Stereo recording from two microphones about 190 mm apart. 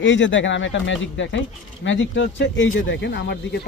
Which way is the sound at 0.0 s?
75° left (ahead or behind).